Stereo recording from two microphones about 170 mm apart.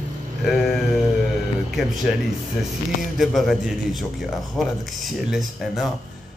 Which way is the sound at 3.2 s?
Centre (ahead or behind).